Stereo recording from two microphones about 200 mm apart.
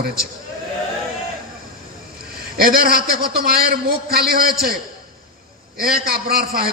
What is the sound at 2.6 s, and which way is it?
A man's voice, 45° right (ahead or behind).